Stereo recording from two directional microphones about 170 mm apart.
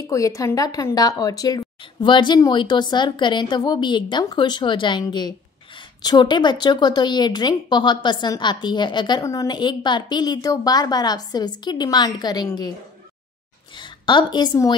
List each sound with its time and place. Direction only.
0.0 s a woman's voice: 20° left (ahead or behind)
13.7 s a woman's voice: 25° left (ahead or behind)